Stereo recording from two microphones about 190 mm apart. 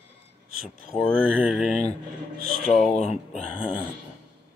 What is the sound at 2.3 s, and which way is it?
Speech, 50° right (ahead or behind).